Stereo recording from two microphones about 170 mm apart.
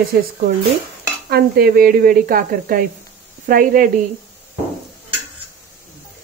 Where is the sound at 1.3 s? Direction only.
60° right (ahead or behind).